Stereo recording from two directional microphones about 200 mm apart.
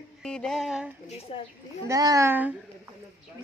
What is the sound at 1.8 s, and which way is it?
Speech, 15° right (ahead or behind).